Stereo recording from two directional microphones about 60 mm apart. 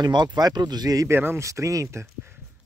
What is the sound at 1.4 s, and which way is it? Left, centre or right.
Speech, right.